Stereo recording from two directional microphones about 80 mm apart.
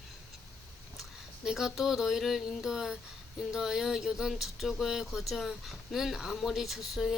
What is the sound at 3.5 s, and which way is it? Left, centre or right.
Speech, centre.